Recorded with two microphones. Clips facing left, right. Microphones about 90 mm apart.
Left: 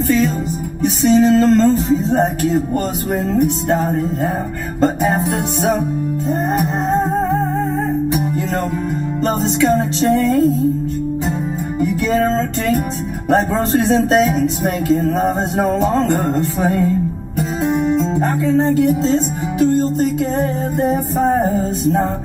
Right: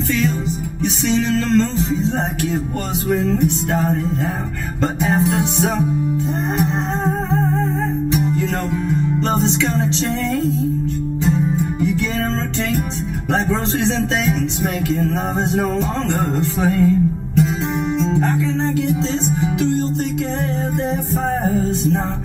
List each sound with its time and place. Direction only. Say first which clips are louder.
1.0 s speech: left 8 dB; 40° left (ahead or behind)
4.7 s music: left 5 dB; 40° left (ahead or behind)
9.6 s speech: left 5 dB; 45° left (ahead or behind)
14.3 s music: left 4 dB; 40° left (ahead or behind)
15.6 s speech: left 5 dB; 40° left (ahead or behind)
17.7 s music: left 2 dB; 50° left (ahead or behind)
19.6 s speech: left 9 dB; 45° left (ahead or behind)